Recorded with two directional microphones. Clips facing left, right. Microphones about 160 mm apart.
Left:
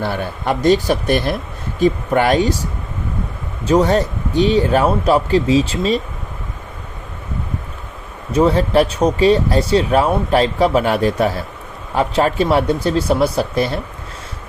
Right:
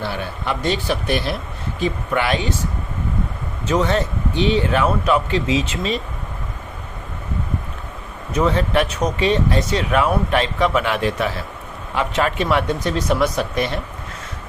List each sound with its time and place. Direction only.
0.0 s speech: 45° left (ahead or behind)
3.7 s speech: 40° left (ahead or behind)
8.3 s speech: 35° left (ahead or behind)